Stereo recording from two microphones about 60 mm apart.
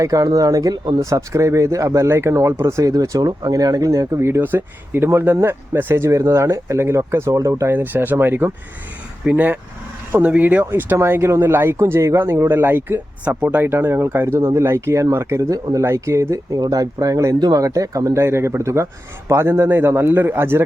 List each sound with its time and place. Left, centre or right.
0.0 s a man's voice: right
7.7 s a man's voice: right
10.7 s speech: right
13.2 s speech: right
13.6 s a man's voice: right
15.4 s speech: right
15.8 s a man's voice: right